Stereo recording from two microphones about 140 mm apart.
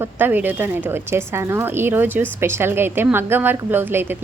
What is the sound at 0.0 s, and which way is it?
Speech, 15° right (ahead or behind).